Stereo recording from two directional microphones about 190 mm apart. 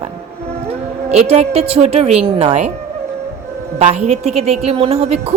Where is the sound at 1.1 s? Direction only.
35° right (ahead or behind).